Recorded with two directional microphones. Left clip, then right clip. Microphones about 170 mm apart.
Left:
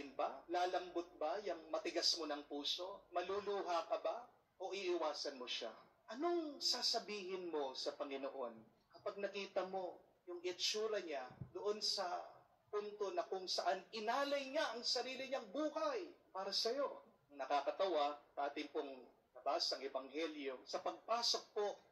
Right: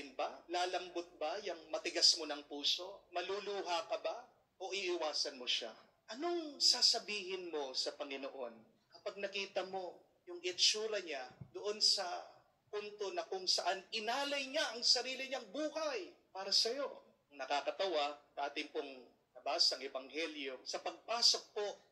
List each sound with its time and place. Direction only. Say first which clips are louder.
0.1 s a man's voice: right 1 dB; 20° right (ahead or behind)
12.7 s speech: right 1 dB; 15° right (ahead or behind)